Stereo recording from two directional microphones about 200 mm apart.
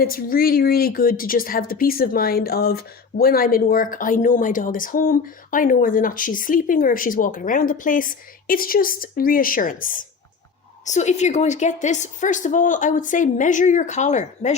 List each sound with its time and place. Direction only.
0.0 s a woman's voice: 45° left (ahead or behind)